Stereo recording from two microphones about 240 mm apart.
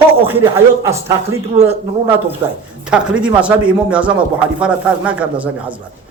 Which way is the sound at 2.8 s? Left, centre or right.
Centre.